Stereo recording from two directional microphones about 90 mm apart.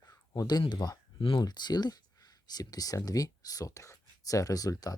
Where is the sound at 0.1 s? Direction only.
45° left (ahead or behind).